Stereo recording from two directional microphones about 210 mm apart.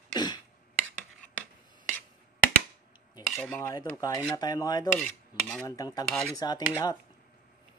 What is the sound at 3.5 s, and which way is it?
Dishes, 15° left (ahead or behind).